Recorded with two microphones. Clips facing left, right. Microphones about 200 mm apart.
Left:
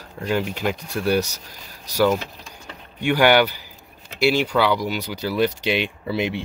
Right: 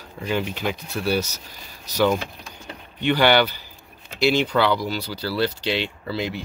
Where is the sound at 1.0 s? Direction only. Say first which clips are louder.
Left 3 dB; 15° left (ahead or behind).